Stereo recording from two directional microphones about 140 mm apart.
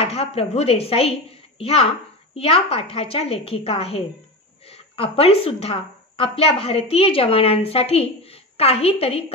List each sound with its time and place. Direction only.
0.0 s a woman's voice: 45° left (ahead or behind)